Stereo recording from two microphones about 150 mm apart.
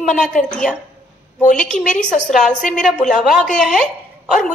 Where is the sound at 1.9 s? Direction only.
5° left (ahead or behind).